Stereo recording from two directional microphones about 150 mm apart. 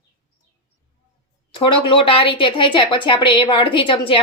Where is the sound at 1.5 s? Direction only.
35° left (ahead or behind).